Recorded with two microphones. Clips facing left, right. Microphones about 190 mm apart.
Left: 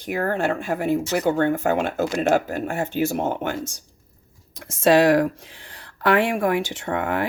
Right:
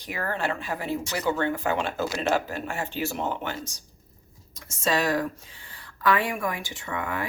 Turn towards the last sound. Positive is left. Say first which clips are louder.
# left 7 dB
turn(degrees=70)  # may be behind; listen again after turning